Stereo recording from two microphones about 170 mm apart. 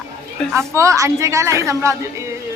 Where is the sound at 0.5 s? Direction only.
15° right (ahead or behind).